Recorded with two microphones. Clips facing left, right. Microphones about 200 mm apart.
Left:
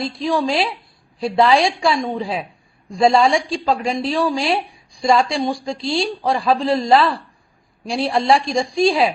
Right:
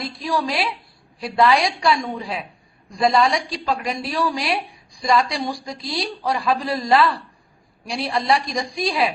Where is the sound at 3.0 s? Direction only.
30° left (ahead or behind).